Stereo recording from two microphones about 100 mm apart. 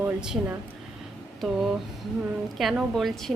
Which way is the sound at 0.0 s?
10° right (ahead or behind).